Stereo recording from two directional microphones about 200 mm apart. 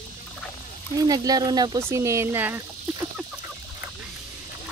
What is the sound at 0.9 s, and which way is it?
Speech, 20° right (ahead or behind).